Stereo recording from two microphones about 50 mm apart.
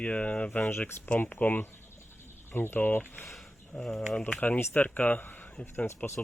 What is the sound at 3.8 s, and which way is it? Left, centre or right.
Speech, centre.